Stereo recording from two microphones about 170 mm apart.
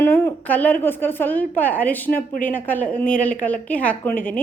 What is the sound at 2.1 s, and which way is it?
Speech, 55° left (ahead or behind).